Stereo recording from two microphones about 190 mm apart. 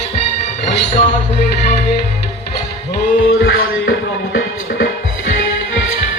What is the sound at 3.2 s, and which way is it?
Music, 90° left.